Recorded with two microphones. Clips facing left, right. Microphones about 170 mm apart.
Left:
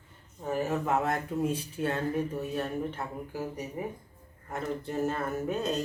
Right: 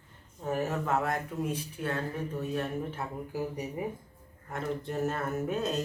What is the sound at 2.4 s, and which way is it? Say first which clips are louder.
Speech: left 1 dB; centre (ahead or behind).